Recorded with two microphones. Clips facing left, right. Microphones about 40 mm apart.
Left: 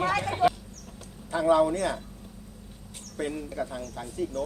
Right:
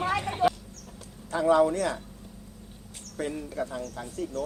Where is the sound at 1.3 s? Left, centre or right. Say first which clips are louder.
Even; centre.